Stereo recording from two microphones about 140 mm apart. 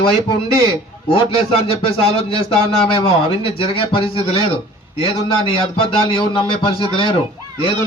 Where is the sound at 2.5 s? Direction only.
40° left (ahead or behind).